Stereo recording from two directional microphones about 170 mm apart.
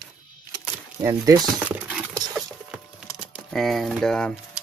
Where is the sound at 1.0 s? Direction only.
20° right (ahead or behind).